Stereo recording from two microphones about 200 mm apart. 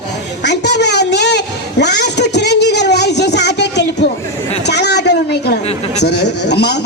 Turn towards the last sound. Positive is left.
turn(degrees=55)  # may be behind; listen again after turning